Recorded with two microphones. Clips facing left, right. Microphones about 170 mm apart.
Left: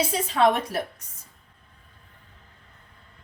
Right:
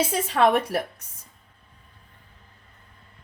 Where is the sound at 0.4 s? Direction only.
55° right (ahead or behind).